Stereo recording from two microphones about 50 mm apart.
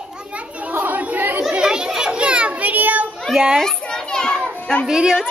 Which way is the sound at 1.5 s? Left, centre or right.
Centre.